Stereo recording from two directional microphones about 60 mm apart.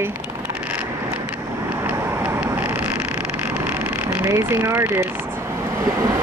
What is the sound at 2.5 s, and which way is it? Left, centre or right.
Vehicle, right.